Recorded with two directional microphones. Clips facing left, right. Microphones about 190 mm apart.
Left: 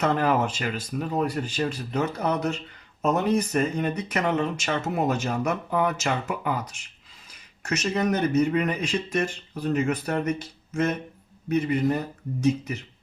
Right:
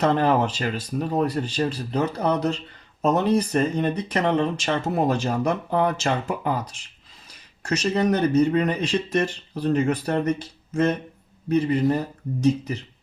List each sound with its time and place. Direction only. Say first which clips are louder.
0.0 s speech: right 3 dB; 35° right (ahead or behind)
11.4 s speech: right 3 dB; 30° right (ahead or behind)